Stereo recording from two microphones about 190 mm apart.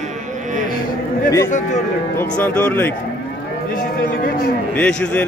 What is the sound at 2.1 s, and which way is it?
Speech, 10° left (ahead or behind).